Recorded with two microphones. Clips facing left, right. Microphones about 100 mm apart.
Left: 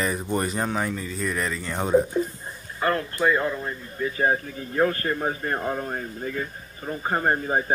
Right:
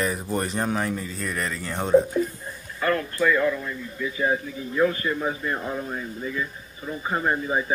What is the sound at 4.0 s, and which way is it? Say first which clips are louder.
Speech: left 2 dB; 50° left (ahead or behind).